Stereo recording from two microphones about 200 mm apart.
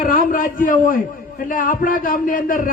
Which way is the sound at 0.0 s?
45° left (ahead or behind).